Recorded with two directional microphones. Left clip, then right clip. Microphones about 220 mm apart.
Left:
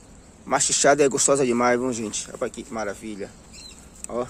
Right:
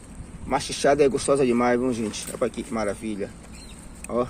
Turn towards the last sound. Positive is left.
turn(degrees=5)  # may be behind; listen again after turning